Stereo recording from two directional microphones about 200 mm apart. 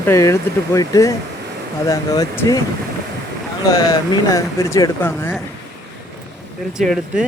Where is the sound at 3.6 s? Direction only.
20° left (ahead or behind).